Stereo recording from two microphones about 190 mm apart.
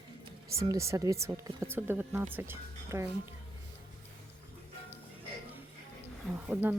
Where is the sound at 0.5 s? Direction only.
15° right (ahead or behind).